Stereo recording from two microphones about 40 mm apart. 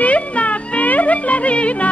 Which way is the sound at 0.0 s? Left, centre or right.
Left.